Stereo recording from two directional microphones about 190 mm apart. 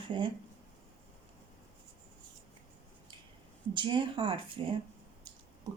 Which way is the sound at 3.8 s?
25° right (ahead or behind).